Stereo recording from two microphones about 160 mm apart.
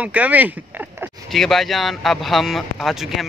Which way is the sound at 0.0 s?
10° right (ahead or behind).